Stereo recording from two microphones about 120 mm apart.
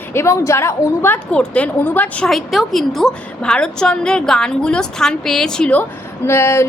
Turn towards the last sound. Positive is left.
turn(degrees=20)  # may be behind; listen again after turning